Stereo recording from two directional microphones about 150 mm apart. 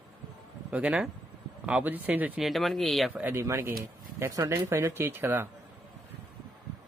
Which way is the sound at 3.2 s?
15° right (ahead or behind).